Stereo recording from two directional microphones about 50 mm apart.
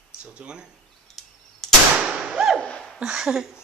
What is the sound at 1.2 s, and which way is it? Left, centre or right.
Arrow, centre.